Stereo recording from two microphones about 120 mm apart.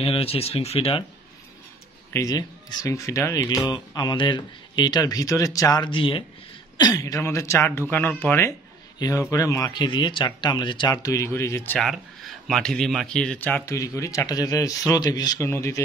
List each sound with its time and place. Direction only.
0.0 s speech: 55° left (ahead or behind)
2.1 s speech: 30° left (ahead or behind)
5.9 s speech: 45° left (ahead or behind)
6.8 s speech: 30° left (ahead or behind)
9.7 s speech: 40° left (ahead or behind); by 11.8 s 20° left (ahead or behind)
11.8 s speech: centre (ahead or behind)
13.7 s speech: 25° left (ahead or behind)
15.4 s speech: 20° left (ahead or behind)